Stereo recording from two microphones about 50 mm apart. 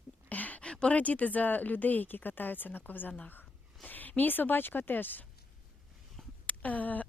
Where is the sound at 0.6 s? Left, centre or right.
Centre.